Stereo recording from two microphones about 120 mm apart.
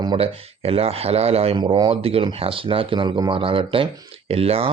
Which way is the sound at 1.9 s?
55° right (ahead or behind).